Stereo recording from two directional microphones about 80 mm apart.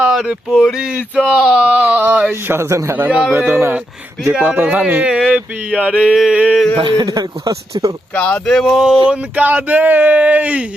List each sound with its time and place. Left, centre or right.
0.0 s a sound: centre
1.3 s speech: centre; by 3.1 s right
3.1 s a sound: centre
3.3 s speech: right
4.3 s speech: centre
4.9 s a sound: centre
6.7 s speech: right
7.1 s speech: right
8.1 s speech: centre
9.0 s speech: right